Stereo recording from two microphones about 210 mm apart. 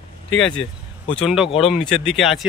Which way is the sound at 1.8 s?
Centre (ahead or behind).